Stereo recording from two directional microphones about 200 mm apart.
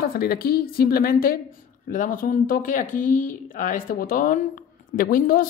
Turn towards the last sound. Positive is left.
turn(degrees=45)  # may be behind; listen again after turning